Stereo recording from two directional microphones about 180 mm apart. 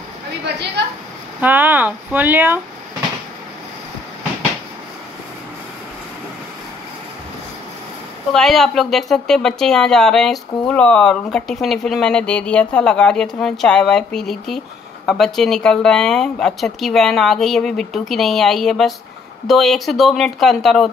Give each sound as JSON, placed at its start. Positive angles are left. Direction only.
{"t": 1.4, "sound": "speech", "side_deg": -10}
{"t": 8.3, "sound": "speech", "side_deg": 0}